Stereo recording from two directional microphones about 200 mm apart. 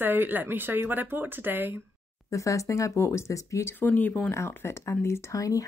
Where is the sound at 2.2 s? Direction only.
15° left (ahead or behind).